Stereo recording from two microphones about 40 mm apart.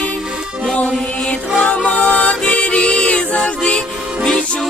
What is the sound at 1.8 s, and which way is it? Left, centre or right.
Music, left.